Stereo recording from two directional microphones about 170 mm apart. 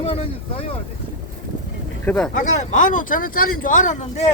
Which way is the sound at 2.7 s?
50° left (ahead or behind).